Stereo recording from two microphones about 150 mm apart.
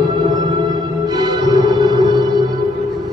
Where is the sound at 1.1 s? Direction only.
30° right (ahead or behind).